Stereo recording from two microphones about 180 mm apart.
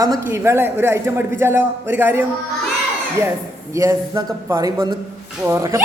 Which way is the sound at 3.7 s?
15° right (ahead or behind).